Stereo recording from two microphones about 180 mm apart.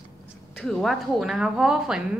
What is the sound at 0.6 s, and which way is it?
Speech, 5° left (ahead or behind).